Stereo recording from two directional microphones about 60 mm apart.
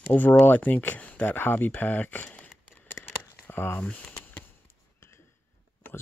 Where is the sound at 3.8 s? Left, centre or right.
Left.